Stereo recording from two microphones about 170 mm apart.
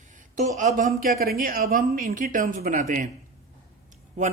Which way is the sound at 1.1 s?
60° right (ahead or behind).